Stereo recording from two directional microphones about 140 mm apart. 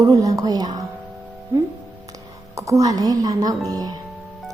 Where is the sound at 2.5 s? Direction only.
25° right (ahead or behind).